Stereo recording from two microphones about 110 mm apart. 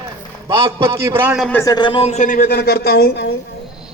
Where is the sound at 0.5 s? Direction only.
55° right (ahead or behind).